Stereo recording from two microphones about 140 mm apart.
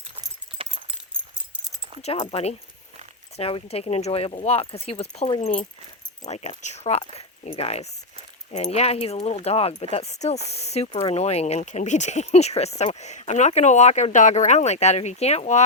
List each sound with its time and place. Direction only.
0.6 s keys jangling: 40° right (ahead or behind)
2.0 s speech: 45° left (ahead or behind)